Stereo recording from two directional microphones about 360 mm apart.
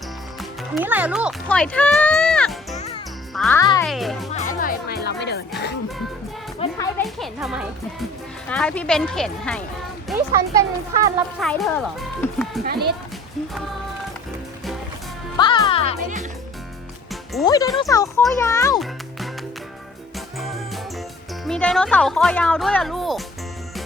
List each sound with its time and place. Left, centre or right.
0.8 s speech: centre
2.7 s music: centre
3.3 s speech: centre
4.3 s music: centre
6.6 s speech: centre
10.1 s a child's voice: centre
15.4 s a child's voice: centre
17.4 s a child's voice: centre
20.1 s music: centre
21.4 s speech: centre